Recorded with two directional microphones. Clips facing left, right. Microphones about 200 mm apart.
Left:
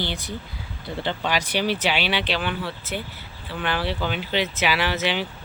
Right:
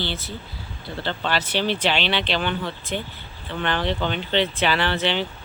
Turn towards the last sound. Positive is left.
turn(degrees=10)  # may be behind; listen again after turning